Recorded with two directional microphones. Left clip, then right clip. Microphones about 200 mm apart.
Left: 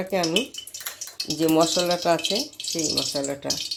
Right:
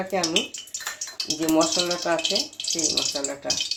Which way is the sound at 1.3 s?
50° left (ahead or behind).